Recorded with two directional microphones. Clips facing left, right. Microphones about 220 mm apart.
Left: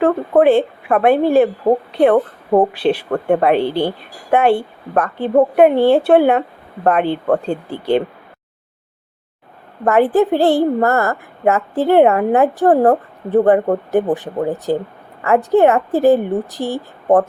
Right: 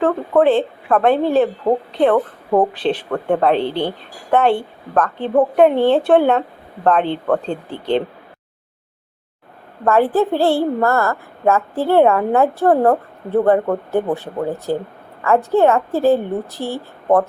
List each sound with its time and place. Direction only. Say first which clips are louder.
0.0 s a woman's voice: left 2 dB; 10° left (ahead or behind)
9.8 s a woman's voice: left 2 dB; 20° left (ahead or behind)